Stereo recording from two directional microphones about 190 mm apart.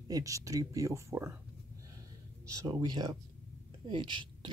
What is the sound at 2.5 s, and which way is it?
A woman's voice, 20° right (ahead or behind).